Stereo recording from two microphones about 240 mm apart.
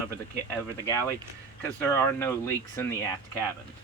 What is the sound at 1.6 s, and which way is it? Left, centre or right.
Speech, centre.